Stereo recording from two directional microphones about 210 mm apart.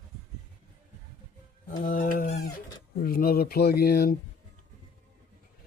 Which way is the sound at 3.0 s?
45° left (ahead or behind).